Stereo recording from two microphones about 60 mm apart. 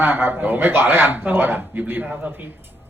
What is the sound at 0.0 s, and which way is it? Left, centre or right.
A man's voice, right.